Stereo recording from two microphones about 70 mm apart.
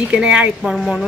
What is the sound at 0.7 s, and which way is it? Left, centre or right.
Speech, centre.